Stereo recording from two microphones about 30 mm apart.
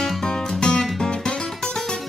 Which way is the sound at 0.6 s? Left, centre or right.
Left.